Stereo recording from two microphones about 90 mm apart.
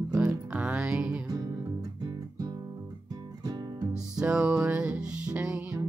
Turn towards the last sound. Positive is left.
turn(degrees=-10)  # may be behind; listen again after turning